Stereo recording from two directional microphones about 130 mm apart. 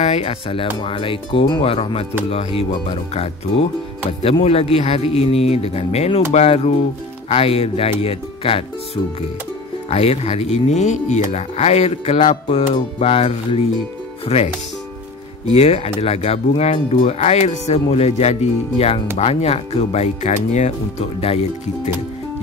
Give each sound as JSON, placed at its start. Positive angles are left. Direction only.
{"t": 0.0, "sound": "speech", "side_deg": 50}
{"t": 9.8, "sound": "speech", "side_deg": 50}